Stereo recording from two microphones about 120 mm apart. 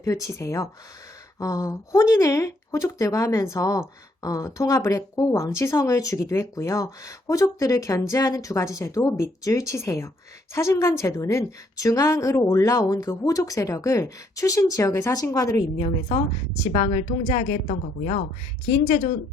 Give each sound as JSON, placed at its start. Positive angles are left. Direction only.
{"t": 0.0, "sound": "speech", "side_deg": 25}
{"t": 15.8, "sound": "a woman's voice", "side_deg": 50}
{"t": 16.7, "sound": "a woman's voice", "side_deg": 65}